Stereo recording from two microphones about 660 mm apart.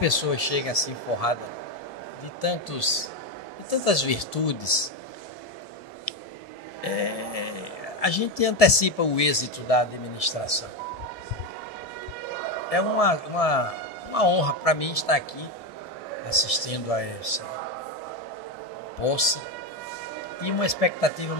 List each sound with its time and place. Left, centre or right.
0.0 s speech: left
2.4 s speech: left
6.8 s speech: left
12.6 s speech: left
16.3 s speech: left
19.0 s speech: left
20.4 s speech: left